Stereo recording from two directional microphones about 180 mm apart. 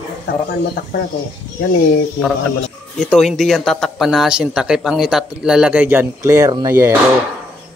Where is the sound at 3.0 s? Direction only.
Centre (ahead or behind); by 6.9 s 20° right (ahead or behind).